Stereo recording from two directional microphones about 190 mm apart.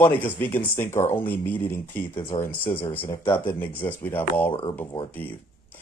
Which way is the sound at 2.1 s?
25° left (ahead or behind).